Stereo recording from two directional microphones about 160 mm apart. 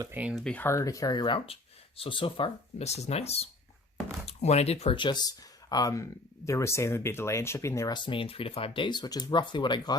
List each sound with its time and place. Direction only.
0.0 s speech: 10° right (ahead or behind)
0.3 s speech: 5° left (ahead or behind); by 10.0 s 25° left (ahead or behind)